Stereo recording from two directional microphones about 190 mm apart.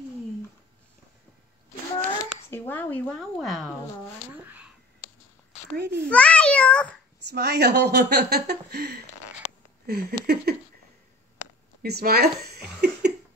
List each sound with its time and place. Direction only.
2.5 s speech: 10° left (ahead or behind)
4.3 s a sound: 10° right (ahead or behind)
5.8 s speech: 60° right (ahead or behind)
6.0 s speech: 5° left (ahead or behind)
7.2 s speech: 60° right (ahead or behind)
9.8 s a sound: 55° right (ahead or behind)
11.8 s speech: 55° right (ahead or behind)